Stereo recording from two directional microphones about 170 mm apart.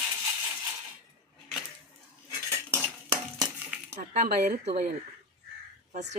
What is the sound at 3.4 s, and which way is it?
Dishes, 10° right (ahead or behind).